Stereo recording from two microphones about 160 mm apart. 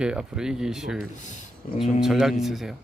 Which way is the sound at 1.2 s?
50° left (ahead or behind).